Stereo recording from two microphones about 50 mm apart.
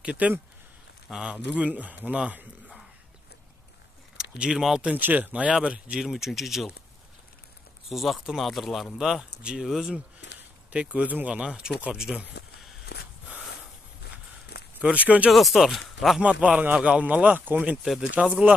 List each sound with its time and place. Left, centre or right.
0.0 s speech: right
1.7 s speech: right
4.2 s speech: centre
5.0 s speech: right
5.5 s speech: centre
6.0 s speech: centre
7.9 s speech: centre
10.7 s speech: right
11.4 s speech: centre
14.8 s speech: right
15.3 s speech: centre
16.4 s speech: right